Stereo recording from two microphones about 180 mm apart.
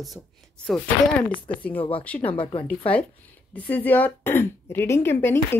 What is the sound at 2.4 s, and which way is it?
Speech, 30° left (ahead or behind).